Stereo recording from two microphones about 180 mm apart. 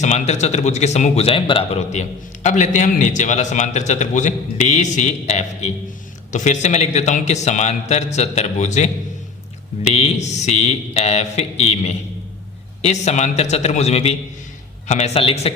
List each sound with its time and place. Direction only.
0.0 s a man's voice: 40° left (ahead or behind)
9.9 s a man's voice: 35° left (ahead or behind)